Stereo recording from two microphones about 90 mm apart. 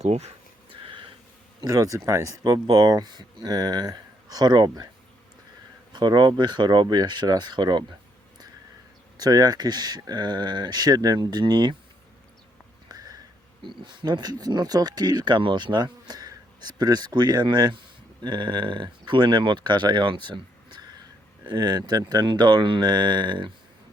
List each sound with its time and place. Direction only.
1.6 s speech: 40° right (ahead or behind)
5.9 s speech: 55° right (ahead or behind)
9.1 s speech: 50° right (ahead or behind)
12.9 s a sound: 45° right (ahead or behind)
13.6 s speech: 60° right (ahead or behind)